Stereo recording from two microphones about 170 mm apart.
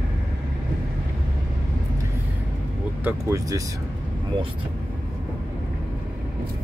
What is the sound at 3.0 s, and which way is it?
Speech, 20° right (ahead or behind).